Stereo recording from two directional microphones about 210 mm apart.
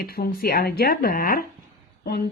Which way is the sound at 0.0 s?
45° left (ahead or behind).